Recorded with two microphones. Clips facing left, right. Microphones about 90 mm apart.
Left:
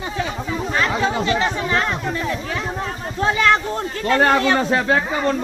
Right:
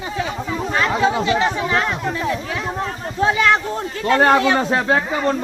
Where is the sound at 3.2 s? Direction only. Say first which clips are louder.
Right 1 dB; 10° right (ahead or behind).